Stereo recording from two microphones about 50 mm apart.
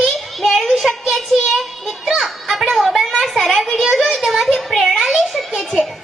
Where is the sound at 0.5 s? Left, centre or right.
Centre.